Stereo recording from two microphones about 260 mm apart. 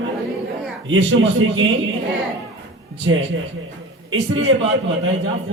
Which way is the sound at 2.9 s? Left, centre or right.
Right.